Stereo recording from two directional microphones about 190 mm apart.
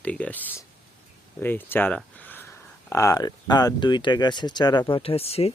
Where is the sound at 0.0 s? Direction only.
5° left (ahead or behind); by 5.5 s 30° left (ahead or behind).